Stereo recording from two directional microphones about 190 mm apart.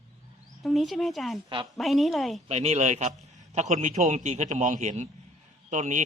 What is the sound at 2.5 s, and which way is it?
Speech, 35° right (ahead or behind).